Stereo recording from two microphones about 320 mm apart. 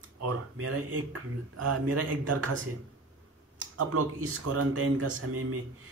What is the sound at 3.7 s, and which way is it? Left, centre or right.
Speech, right.